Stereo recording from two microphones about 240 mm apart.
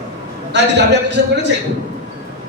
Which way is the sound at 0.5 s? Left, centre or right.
Right.